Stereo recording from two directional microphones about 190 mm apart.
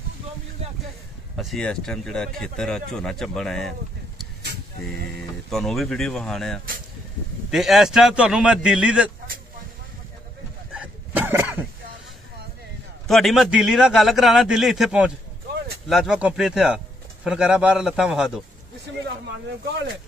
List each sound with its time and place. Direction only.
1.3 s speech: centre (ahead or behind)
5.5 s speech: centre (ahead or behind)
10.7 s a sound: 10° right (ahead or behind)
13.0 s speech: centre (ahead or behind)
19.7 s speech: 65° right (ahead or behind)